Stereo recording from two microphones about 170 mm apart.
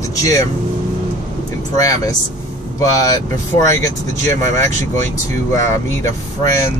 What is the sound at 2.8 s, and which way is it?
Speech, 20° left (ahead or behind).